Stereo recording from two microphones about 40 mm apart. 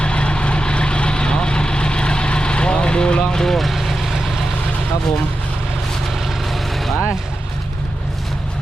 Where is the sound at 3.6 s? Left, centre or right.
Centre.